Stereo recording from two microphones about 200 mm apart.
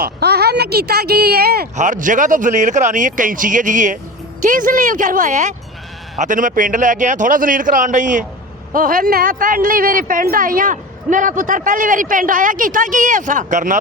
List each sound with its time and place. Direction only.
0.0 s speech: 55° right (ahead or behind)
1.7 s a man's voice: 40° right (ahead or behind)